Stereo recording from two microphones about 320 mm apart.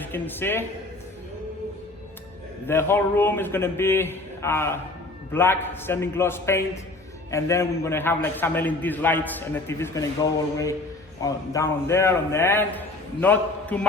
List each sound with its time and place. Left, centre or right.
0.0 s a man's voice: centre
2.6 s a man's voice: centre
11.2 s a man's voice: centre